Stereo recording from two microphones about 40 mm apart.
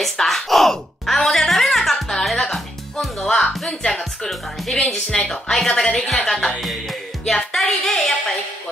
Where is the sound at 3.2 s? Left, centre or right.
Centre.